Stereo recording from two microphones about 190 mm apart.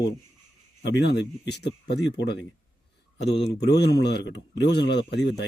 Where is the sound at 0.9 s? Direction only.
65° left (ahead or behind).